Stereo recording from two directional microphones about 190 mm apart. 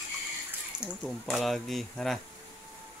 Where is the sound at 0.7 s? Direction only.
20° right (ahead or behind).